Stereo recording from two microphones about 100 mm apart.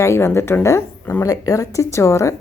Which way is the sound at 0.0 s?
25° left (ahead or behind).